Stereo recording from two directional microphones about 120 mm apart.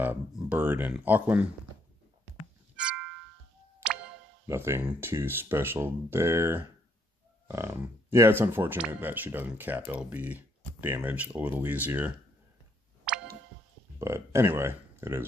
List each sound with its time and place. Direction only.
0.4 s speech: 15° right (ahead or behind)
2.7 s music: 10° right (ahead or behind)
4.5 s speech: 20° right (ahead or behind)
7.4 s a sound: 25° right (ahead or behind)
8.1 s speech: 20° right (ahead or behind)
13.1 s tick: 10° right (ahead or behind)
13.9 s speech: 25° right (ahead or behind)